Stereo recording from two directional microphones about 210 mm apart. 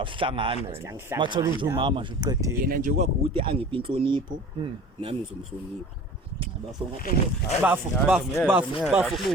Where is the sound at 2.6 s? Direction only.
45° right (ahead or behind).